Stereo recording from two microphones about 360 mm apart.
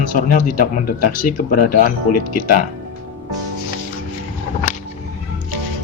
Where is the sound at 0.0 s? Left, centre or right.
Left.